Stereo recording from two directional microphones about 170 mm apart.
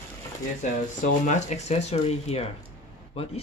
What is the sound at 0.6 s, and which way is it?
Speech, 45° left (ahead or behind).